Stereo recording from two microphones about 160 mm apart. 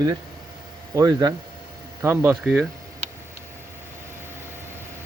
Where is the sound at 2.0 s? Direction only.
10° right (ahead or behind).